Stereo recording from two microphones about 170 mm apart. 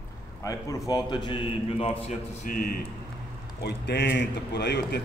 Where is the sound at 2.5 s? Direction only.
55° left (ahead or behind).